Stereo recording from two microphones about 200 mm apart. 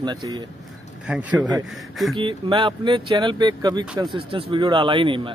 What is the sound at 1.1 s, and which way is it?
Speech, 5° right (ahead or behind).